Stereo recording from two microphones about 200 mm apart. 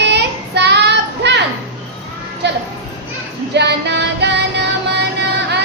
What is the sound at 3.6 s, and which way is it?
Music, 60° right (ahead or behind).